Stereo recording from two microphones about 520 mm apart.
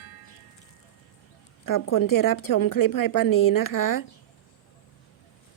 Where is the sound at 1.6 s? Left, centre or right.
Left.